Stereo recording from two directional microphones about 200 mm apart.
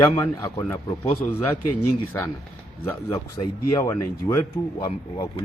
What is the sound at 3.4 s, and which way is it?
Speech, 30° left (ahead or behind).